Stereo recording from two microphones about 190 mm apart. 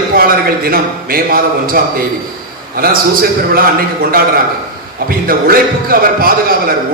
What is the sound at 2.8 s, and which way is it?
Speech, 50° right (ahead or behind).